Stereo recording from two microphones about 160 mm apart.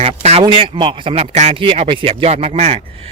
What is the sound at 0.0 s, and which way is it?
Speech, 40° right (ahead or behind).